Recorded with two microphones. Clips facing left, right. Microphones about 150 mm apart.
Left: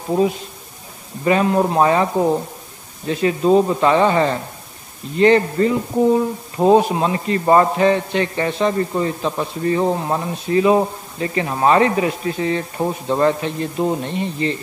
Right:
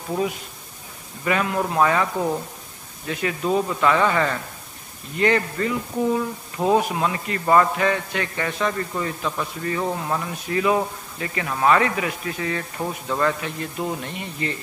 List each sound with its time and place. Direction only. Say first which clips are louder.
1.2 s speech: left 7 dB; 30° left (ahead or behind)